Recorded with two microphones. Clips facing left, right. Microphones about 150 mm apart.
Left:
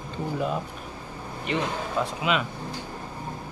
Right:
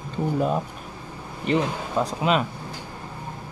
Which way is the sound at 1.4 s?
35° right (ahead or behind).